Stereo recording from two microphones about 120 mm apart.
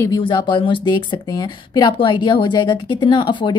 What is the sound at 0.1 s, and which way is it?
A woman's voice, 40° left (ahead or behind).